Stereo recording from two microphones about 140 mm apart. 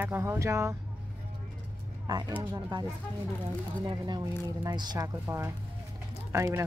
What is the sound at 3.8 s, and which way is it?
A woman's voice, 30° right (ahead or behind).